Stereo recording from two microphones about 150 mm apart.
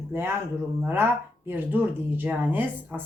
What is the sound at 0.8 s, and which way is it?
Speech, 15° right (ahead or behind).